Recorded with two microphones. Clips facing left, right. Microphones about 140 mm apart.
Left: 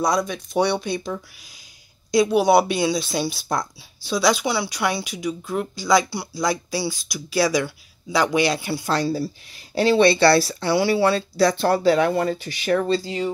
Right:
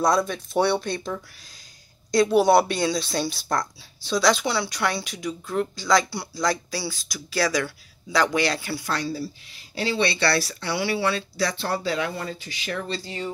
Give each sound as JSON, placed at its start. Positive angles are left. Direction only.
{"t": 0.2, "sound": "speech", "side_deg": -5}
{"t": 8.9, "sound": "speech", "side_deg": 35}
{"t": 9.8, "sound": "speech", "side_deg": 50}
{"t": 10.1, "sound": "speech", "side_deg": 35}